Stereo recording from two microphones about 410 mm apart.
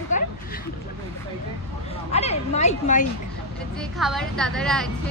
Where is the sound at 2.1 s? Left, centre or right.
Centre.